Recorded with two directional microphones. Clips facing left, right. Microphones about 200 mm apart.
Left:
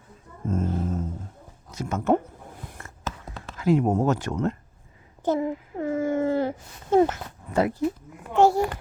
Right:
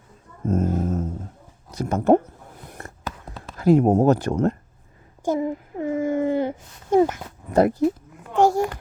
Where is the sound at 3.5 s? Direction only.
40° right (ahead or behind).